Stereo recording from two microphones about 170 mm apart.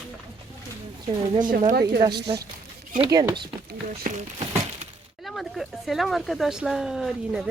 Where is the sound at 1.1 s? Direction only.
25° right (ahead or behind).